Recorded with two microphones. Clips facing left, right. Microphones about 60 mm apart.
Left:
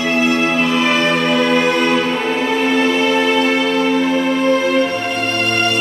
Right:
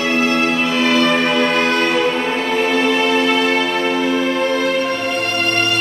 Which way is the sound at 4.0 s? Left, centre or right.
Centre.